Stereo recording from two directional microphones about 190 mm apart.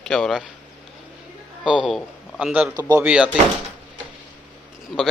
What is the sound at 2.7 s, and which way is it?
Speech, 20° right (ahead or behind).